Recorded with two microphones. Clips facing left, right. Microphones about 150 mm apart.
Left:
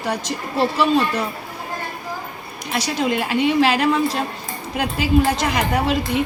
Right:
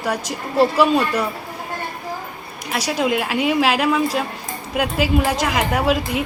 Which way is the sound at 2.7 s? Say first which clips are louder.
Right 1 dB; 5° right (ahead or behind).